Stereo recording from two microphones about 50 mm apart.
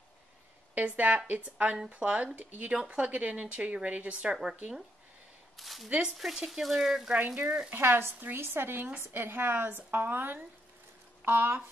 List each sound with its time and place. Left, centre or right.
0.7 s a woman's voice: right
2.7 s a woman's voice: right
5.6 s speech: centre
5.9 s a woman's voice: centre
6.1 s speech: centre
7.2 s a woman's voice: right
7.7 s a woman's voice: right
9.8 s a woman's voice: right